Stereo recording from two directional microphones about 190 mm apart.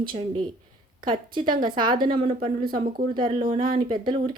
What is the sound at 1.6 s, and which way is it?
Speech, 25° right (ahead or behind).